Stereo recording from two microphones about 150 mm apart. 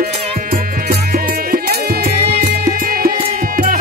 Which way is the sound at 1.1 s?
75° right (ahead or behind).